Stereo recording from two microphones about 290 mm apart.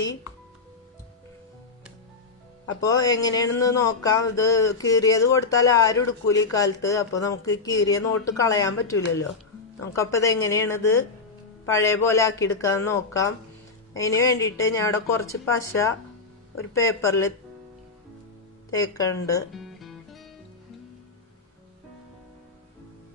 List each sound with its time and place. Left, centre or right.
2.6 s speech: centre
18.8 s speech: centre
19.5 s music: centre